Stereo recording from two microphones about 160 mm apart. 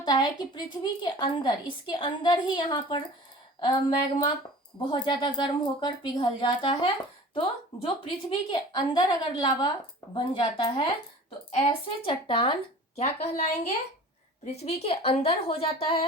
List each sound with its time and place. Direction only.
0.0 s a woman's voice: 25° left (ahead or behind)
8.3 s a woman's voice: 30° left (ahead or behind)
13.0 s a woman's voice: 45° left (ahead or behind)